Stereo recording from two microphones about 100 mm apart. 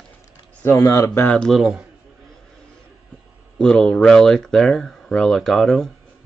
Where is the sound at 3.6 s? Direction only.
5° left (ahead or behind).